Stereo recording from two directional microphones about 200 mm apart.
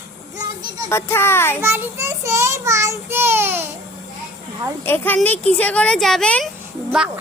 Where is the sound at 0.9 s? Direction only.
10° left (ahead or behind).